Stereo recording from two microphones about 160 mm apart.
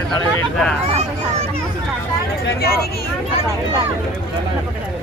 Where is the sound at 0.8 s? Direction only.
40° right (ahead or behind).